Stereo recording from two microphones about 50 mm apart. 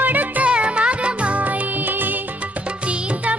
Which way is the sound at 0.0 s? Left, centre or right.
Right.